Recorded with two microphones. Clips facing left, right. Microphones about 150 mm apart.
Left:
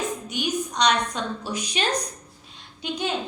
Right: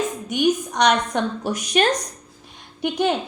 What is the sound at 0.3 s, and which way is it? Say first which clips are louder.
A woman's voice: right 7 dB; 55° right (ahead or behind).